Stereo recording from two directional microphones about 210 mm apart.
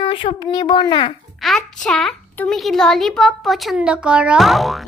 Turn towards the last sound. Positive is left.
turn(degrees=0)  # may be behind; listen again after turning